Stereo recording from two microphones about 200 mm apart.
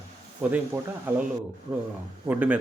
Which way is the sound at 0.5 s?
10° right (ahead or behind).